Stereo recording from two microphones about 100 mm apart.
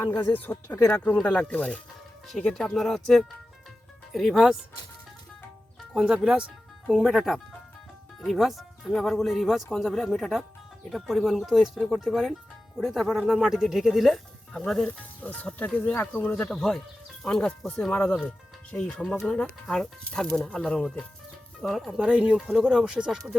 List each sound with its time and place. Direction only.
0.2 s speech: 20° left (ahead or behind); by 4.5 s centre (ahead or behind)
5.9 s speech: 5° right (ahead or behind)
14.8 s speech: 15° left (ahead or behind); by 22.4 s 10° right (ahead or behind)
22.4 s speech: centre (ahead or behind)